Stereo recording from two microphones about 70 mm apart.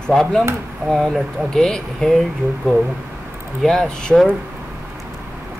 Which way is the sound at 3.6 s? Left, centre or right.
Centre.